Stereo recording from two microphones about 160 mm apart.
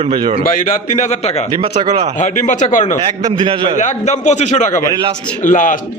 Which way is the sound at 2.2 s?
50° left (ahead or behind).